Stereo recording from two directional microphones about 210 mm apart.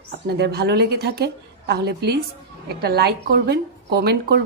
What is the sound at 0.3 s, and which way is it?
Speech, 50° right (ahead or behind).